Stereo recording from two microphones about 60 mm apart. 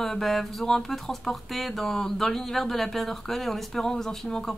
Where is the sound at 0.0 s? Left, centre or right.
Centre.